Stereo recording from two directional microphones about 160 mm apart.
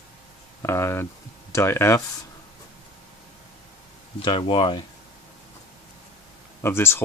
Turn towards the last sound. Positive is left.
turn(degrees=15)  # may be behind; listen again after turning